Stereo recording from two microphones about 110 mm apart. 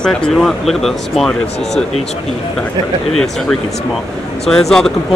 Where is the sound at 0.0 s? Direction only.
5° left (ahead or behind).